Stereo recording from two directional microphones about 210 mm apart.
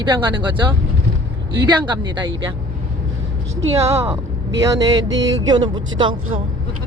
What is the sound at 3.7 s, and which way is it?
Speech, 15° right (ahead or behind).